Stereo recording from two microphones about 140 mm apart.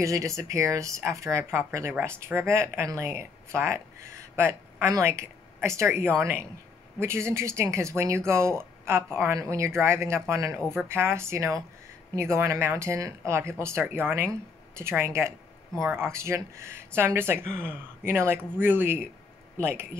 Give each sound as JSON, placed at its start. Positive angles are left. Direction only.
{"t": 0.0, "sound": "speech", "side_deg": -20}